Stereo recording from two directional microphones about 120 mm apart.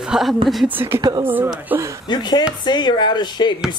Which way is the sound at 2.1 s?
40° left (ahead or behind).